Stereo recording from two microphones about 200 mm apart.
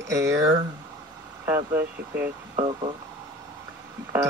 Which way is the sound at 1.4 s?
10° right (ahead or behind).